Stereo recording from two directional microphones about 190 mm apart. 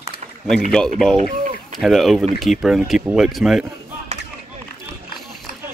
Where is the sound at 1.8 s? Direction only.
Centre (ahead or behind).